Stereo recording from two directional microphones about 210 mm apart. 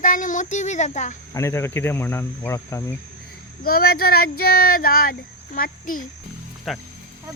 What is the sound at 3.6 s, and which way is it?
Speech, 45° left (ahead or behind).